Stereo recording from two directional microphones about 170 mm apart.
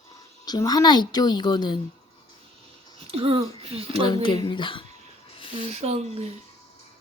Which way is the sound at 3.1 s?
35° right (ahead or behind).